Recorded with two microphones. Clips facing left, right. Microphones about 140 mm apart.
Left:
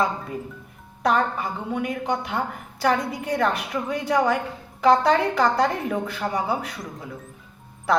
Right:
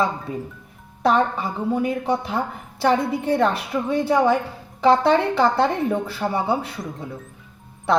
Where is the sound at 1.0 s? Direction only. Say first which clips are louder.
Right 3 dB; 30° right (ahead or behind).